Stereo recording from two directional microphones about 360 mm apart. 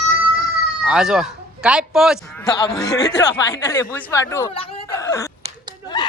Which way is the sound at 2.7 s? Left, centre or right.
Centre.